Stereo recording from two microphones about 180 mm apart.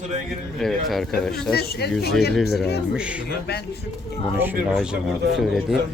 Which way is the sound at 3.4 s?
65° left (ahead or behind).